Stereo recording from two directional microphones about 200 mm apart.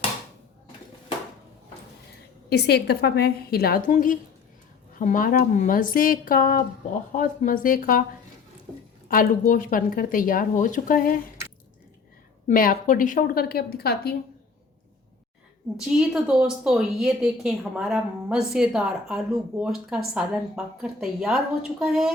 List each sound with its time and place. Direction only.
2.5 s a woman's voice: 55° left (ahead or behind)
9.0 s a woman's voice: 40° left (ahead or behind)
12.5 s a woman's voice: 40° left (ahead or behind)
15.8 s speech: 5° right (ahead or behind)